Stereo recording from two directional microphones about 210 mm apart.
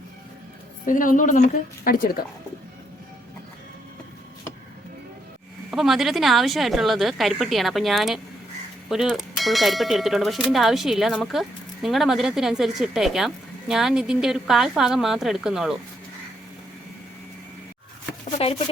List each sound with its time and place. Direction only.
0.9 s a woman's voice: 40° left (ahead or behind)
5.7 s speech: centre (ahead or behind)
18.4 s speech: 30° left (ahead or behind)